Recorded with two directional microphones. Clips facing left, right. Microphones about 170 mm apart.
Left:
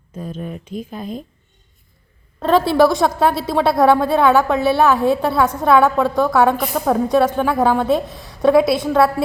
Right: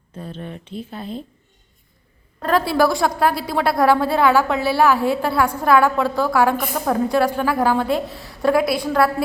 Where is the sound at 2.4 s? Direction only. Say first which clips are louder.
Left 4 dB; 25° left (ahead or behind).